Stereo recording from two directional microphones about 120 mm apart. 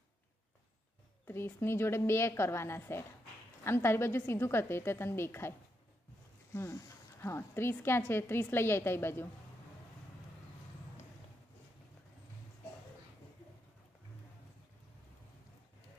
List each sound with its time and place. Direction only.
1.2 s speech: 20° left (ahead or behind)
6.5 s speech: 20° left (ahead or behind)